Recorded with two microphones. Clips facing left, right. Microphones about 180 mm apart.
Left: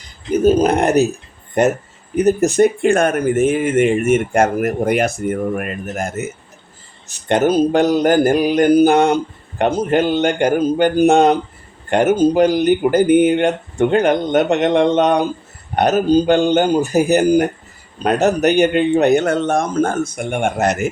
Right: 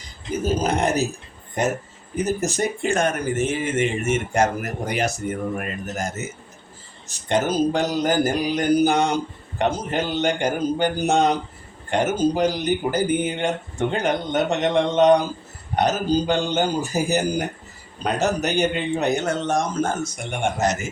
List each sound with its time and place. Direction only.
0.3 s speech: 60° left (ahead or behind)
2.1 s speech: 60° left (ahead or behind)